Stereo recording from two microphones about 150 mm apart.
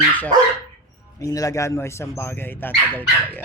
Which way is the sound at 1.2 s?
25° left (ahead or behind).